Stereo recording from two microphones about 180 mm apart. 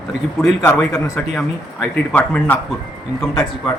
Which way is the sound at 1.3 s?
Centre (ahead or behind).